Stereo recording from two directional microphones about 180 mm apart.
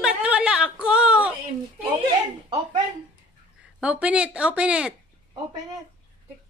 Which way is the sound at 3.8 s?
5° right (ahead or behind).